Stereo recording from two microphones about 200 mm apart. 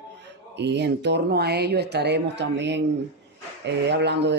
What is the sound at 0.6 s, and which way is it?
Speech, 60° right (ahead or behind).